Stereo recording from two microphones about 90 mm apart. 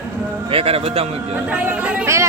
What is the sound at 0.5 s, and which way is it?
Speech, 90° right.